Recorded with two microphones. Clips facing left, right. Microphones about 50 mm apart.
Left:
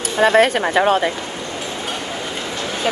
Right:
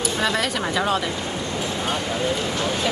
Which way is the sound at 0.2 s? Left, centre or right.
Left.